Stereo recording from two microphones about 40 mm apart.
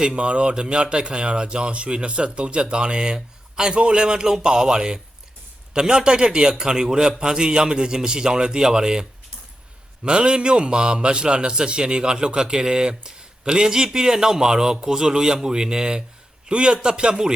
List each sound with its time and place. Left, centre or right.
0.0 s a man's voice: right